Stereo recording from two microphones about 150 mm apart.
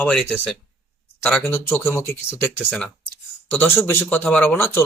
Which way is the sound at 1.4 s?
15° left (ahead or behind).